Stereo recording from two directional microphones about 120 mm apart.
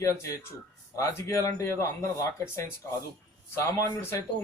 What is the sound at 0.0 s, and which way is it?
Speech, 25° left (ahead or behind).